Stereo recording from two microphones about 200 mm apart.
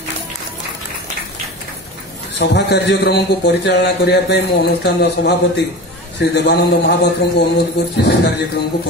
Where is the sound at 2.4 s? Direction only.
60° left (ahead or behind).